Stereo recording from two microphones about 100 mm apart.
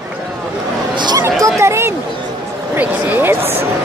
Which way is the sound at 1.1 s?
30° right (ahead or behind).